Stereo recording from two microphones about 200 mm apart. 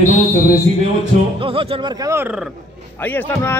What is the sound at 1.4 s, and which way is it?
Speech, 25° right (ahead or behind).